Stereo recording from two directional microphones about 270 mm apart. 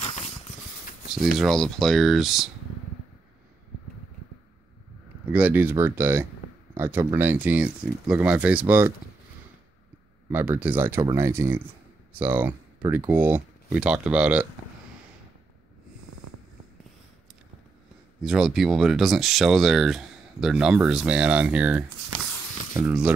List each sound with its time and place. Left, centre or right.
0.0 s a sound: left
1.1 s speech: centre
5.2 s speech: centre
10.3 s speech: centre
18.2 s speech: centre